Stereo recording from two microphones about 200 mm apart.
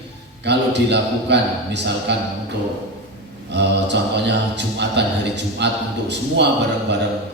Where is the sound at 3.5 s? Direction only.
60° right (ahead or behind).